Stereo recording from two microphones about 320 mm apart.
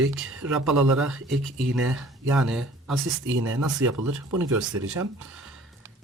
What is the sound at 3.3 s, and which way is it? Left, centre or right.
Speech, right.